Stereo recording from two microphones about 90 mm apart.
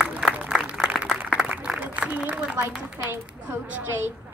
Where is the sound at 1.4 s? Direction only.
15° right (ahead or behind).